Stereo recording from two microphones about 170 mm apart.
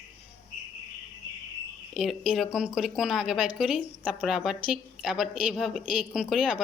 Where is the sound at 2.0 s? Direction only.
Centre (ahead or behind).